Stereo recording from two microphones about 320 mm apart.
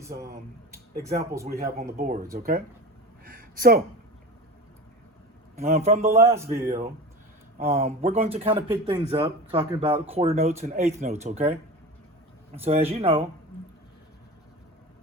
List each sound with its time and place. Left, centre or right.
1.0 s speech: centre
1.5 s speech: right
3.2 s a sound: right
5.5 s speech: right
6.1 s speech: centre
6.7 s speech: right
12.5 s speech: centre